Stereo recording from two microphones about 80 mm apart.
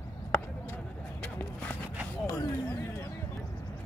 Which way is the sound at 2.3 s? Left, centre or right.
Left.